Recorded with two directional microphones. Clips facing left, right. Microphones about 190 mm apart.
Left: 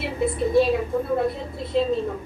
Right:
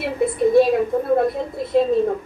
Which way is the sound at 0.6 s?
50° right (ahead or behind).